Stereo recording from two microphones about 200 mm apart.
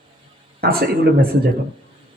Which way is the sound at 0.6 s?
50° right (ahead or behind).